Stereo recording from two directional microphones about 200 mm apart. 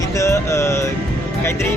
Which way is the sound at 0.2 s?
15° left (ahead or behind).